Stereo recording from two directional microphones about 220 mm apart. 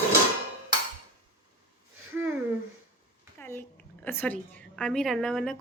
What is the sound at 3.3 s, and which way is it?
A woman's voice, 10° left (ahead or behind).